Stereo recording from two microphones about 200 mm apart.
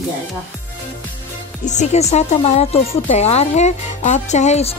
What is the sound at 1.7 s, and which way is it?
Speech, 35° left (ahead or behind).